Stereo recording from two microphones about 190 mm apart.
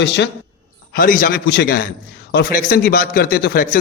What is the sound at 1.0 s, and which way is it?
A man's voice, 45° left (ahead or behind).